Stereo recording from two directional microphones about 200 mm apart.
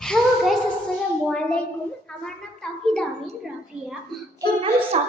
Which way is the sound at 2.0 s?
5° left (ahead or behind).